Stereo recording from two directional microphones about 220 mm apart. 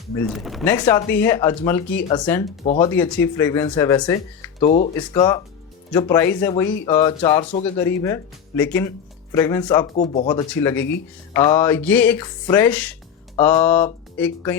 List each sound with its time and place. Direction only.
0.3 s speech: centre (ahead or behind)
0.7 s speech: 10° left (ahead or behind)
7.6 s speech: 10° left (ahead or behind)
9.9 s speech: 30° left (ahead or behind)
10.5 s speech: 10° left (ahead or behind)